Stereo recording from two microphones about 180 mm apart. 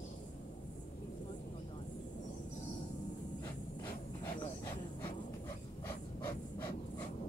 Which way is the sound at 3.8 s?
25° left (ahead or behind).